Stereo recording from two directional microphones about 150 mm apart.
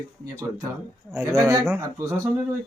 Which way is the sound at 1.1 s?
20° right (ahead or behind).